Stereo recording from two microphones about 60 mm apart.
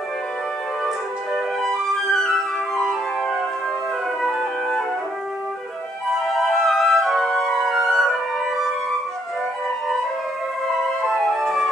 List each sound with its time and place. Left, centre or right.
1.6 s flute: centre
4.2 s music: centre
6.1 s music: centre
10.7 s music: centre